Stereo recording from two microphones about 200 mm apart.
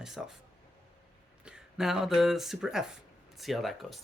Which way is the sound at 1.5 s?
5° right (ahead or behind).